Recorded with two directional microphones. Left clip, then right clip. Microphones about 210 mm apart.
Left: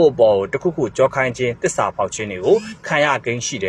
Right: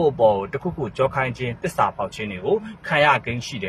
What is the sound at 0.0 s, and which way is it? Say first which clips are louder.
Speech: left 5 dB; 20° left (ahead or behind).